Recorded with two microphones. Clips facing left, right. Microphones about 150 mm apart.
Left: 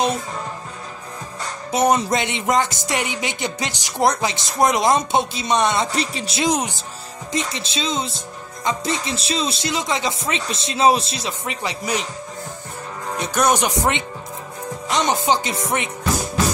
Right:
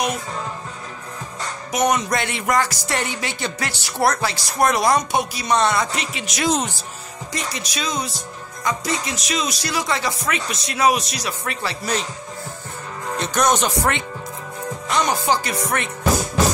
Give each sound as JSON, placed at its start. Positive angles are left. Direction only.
{"t": 1.7, "sound": "speech", "side_deg": 30}
{"t": 5.9, "sound": "speech", "side_deg": 35}
{"t": 6.4, "sound": "speech", "side_deg": 15}
{"t": 13.2, "sound": "speech", "side_deg": 10}